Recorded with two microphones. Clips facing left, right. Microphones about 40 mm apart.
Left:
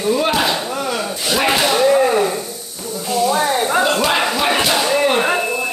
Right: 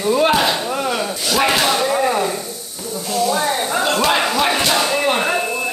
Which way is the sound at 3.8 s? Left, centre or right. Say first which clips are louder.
Right 1 dB; centre.